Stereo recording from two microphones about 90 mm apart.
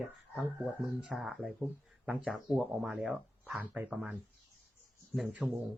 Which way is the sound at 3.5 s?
15° right (ahead or behind).